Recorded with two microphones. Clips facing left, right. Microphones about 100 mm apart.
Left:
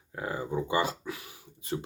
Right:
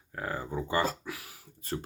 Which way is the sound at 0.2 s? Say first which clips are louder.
Left 2 dB; 20° left (ahead or behind).